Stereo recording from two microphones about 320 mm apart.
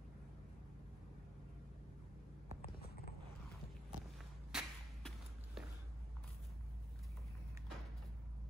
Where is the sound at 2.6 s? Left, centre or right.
Left.